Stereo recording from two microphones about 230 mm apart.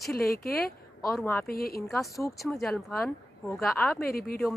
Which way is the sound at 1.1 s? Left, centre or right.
Centre.